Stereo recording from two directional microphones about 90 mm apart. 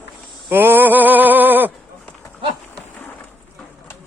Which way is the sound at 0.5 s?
20° right (ahead or behind).